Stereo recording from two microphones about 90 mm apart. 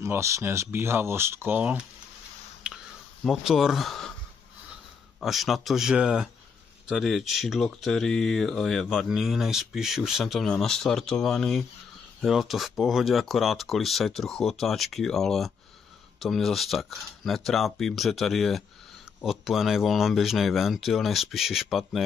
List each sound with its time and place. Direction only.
0.0 s speech: 35° right (ahead or behind)
1.6 s speech: 15° right (ahead or behind)
2.6 s a sound: 10° right (ahead or behind)
3.3 s speech: 5° right (ahead or behind)
5.2 s speech: centre (ahead or behind)